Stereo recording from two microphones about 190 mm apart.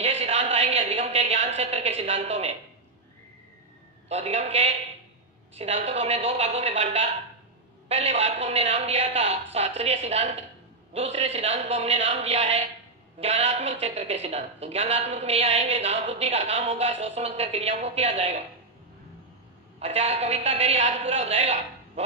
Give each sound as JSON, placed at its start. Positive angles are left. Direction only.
{"t": 0.0, "sound": "a sound", "side_deg": -35}
{"t": 4.1, "sound": "a woman's voice", "side_deg": -35}
{"t": 19.8, "sound": "a woman's voice", "side_deg": -35}